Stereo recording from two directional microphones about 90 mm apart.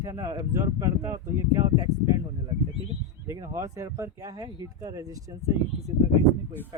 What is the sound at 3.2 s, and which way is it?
Speech, 35° right (ahead or behind).